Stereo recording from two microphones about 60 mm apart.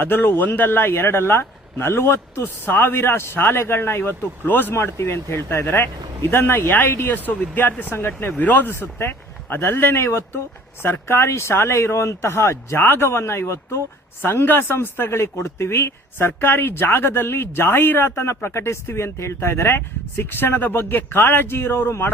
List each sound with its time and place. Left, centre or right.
0.0 s speech: left
4.7 s speech: left
14.2 s speech: left
16.1 s speech: left